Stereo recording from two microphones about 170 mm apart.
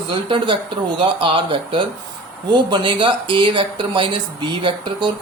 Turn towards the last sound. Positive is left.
turn(degrees=-30)  # may be behind; listen again after turning